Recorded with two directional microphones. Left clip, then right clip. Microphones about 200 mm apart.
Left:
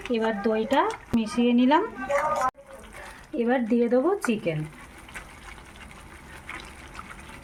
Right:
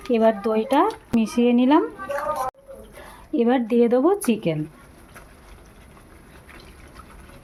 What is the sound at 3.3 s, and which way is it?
Speech, 50° right (ahead or behind).